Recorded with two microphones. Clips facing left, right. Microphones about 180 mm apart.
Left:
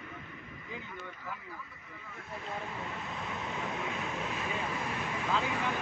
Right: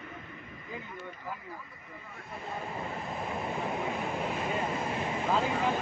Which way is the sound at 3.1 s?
30° right (ahead or behind).